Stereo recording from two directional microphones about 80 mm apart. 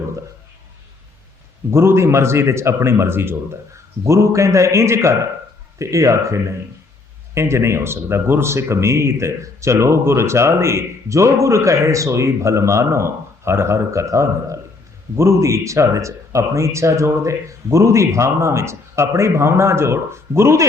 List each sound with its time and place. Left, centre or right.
1.7 s speech: right